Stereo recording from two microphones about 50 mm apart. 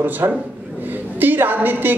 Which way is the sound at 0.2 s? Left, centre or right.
Right.